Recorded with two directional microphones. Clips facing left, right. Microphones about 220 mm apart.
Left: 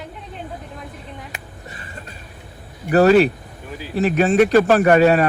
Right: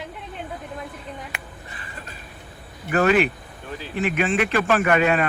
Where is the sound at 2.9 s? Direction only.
35° left (ahead or behind).